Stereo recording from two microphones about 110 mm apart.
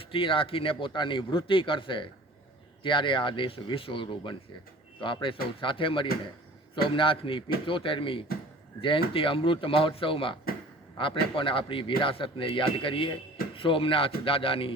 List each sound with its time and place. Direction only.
0.1 s speech: 55° left (ahead or behind)